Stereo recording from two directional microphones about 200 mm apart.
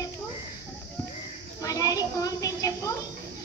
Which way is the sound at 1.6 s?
15° left (ahead or behind).